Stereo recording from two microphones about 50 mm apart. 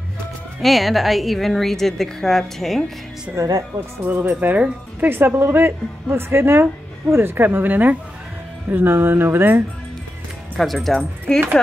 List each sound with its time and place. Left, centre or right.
0.6 s a woman's voice: centre
3.4 s speech: right
4.0 s speech: right
7.4 s speech: right
8.6 s speech: right
10.6 s a woman's voice: centre